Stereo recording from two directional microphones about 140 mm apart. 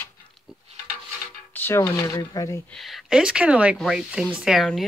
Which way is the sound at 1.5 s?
15° left (ahead or behind).